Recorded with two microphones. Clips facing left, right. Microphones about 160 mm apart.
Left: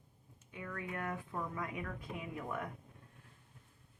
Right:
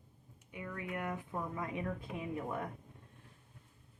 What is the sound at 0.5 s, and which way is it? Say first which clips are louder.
A woman's voice: right 1 dB; 15° right (ahead or behind).